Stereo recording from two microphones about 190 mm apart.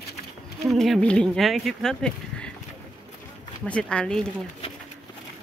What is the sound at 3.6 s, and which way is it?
Speech, 5° left (ahead or behind).